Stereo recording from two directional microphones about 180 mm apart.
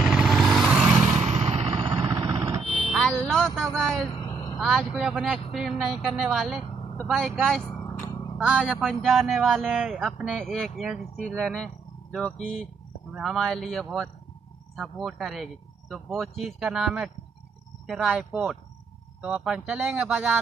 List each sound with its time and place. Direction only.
0.0 s vehicle: centre (ahead or behind)
1.2 s vehicle: 35° right (ahead or behind); by 2.6 s 15° right (ahead or behind)
2.9 s music: 5° left (ahead or behind)
3.7 s vehicle: 5° left (ahead or behind)
4.1 s a sound: 25° left (ahead or behind)
4.6 s speech: centre (ahead or behind)